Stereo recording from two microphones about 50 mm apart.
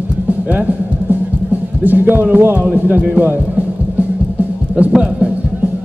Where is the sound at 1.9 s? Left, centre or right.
Right.